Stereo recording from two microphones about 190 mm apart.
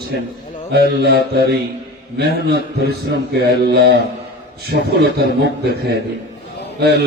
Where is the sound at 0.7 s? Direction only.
55° right (ahead or behind).